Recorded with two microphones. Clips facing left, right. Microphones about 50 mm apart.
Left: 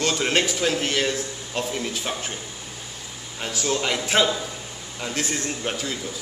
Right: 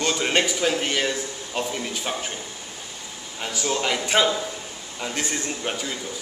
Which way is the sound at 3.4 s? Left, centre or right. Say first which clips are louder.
Even; centre.